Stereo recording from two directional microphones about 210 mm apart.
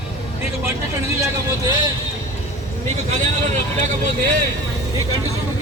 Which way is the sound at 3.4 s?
35° right (ahead or behind).